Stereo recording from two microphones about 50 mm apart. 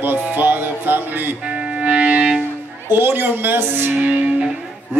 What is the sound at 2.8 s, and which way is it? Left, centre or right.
Speech, right.